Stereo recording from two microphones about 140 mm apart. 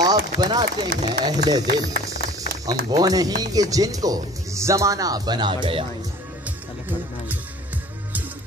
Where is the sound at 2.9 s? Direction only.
25° right (ahead or behind).